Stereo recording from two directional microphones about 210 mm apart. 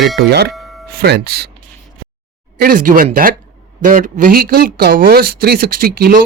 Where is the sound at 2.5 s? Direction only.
40° right (ahead or behind).